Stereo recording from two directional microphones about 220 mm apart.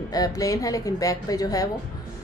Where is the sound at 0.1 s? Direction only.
15° left (ahead or behind).